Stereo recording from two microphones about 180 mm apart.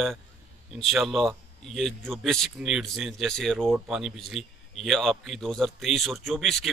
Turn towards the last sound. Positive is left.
turn(degrees=0)  # may be behind; listen again after turning